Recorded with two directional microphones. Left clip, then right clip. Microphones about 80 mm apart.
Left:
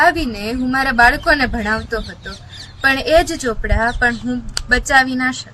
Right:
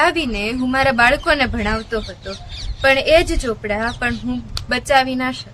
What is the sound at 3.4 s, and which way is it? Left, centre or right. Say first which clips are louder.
Speech: left 2 dB; centre.